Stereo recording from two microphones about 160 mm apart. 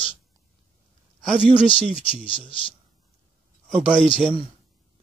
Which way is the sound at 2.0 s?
35° left (ahead or behind).